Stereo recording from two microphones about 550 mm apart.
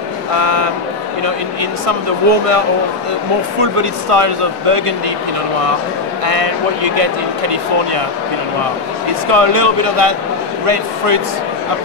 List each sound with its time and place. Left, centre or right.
0.4 s a sound: right
1.2 s speech: right
6.2 s speech: right
9.3 s speech: right